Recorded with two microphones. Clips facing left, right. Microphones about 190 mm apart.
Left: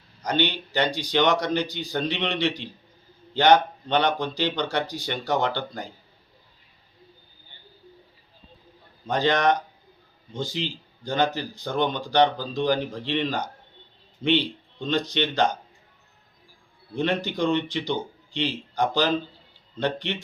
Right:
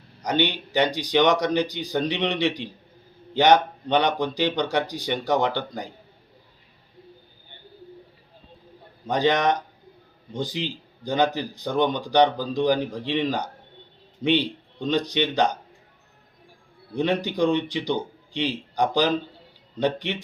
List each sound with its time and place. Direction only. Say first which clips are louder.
0.3 s speech: right 1 dB; 15° right (ahead or behind)
9.0 s speech: right 1 dB; 15° right (ahead or behind)
16.9 s speech: right 2 dB; 10° right (ahead or behind)